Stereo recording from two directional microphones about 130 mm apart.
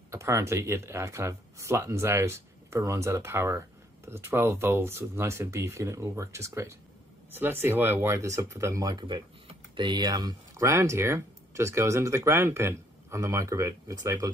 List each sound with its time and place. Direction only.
0.1 s speech: 20° right (ahead or behind)